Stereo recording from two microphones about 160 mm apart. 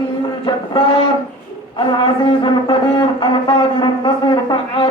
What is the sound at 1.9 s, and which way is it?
A man's voice, 30° left (ahead or behind).